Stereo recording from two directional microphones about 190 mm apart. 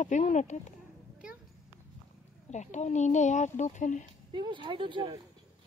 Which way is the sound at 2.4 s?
40° left (ahead or behind).